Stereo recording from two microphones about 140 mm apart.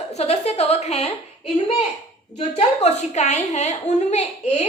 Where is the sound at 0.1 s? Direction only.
50° left (ahead or behind).